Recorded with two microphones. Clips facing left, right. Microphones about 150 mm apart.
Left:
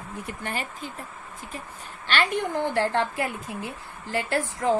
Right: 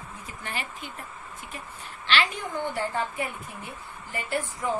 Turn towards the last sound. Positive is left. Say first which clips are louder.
# left 4 dB
turn(degrees=90)